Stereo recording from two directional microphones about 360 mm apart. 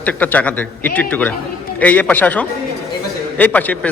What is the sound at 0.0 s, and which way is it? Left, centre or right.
Speech, centre.